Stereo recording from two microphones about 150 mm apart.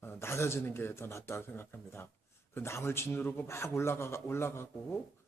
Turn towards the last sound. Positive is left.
turn(degrees=15)  # may be behind; listen again after turning